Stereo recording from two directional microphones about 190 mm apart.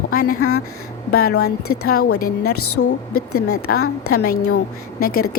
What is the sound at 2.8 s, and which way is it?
Speech, 90° left.